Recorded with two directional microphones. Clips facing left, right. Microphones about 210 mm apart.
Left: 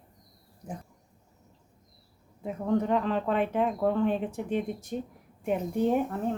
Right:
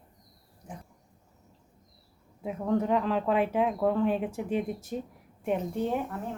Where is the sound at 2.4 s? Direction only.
Centre (ahead or behind).